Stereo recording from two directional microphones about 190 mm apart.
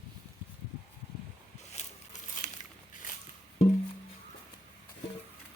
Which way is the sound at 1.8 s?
35° left (ahead or behind).